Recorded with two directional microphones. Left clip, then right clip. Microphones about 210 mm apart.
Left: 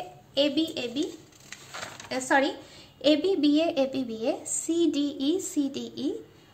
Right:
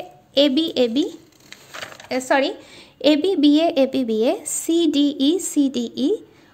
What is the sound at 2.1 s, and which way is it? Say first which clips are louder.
A woman's voice: right 5 dB; 40° right (ahead or behind).